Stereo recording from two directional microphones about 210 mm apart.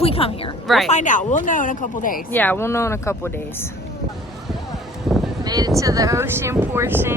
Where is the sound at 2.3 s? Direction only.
10° left (ahead or behind).